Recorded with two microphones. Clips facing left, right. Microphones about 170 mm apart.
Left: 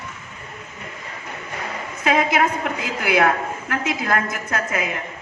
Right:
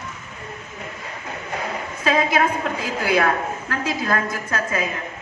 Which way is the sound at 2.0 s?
20° left (ahead or behind).